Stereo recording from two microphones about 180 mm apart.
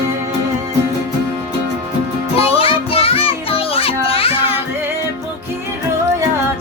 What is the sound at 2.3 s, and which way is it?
Music, 30° left (ahead or behind).